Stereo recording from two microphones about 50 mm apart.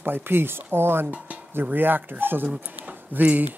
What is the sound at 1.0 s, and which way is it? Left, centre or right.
Speech, right.